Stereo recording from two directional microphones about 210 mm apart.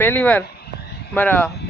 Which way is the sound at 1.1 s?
10° left (ahead or behind).